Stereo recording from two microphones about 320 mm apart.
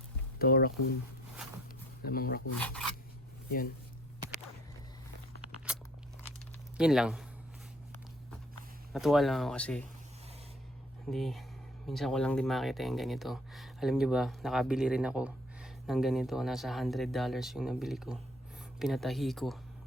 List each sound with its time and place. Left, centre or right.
0.3 s speech: left
2.0 s speech: left
2.6 s speech: centre
5.7 s crunch: centre
6.7 s speech: centre
8.9 s speech: centre
11.1 s speech: centre